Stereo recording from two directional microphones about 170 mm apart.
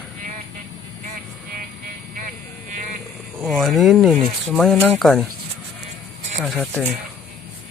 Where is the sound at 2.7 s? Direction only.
50° right (ahead or behind).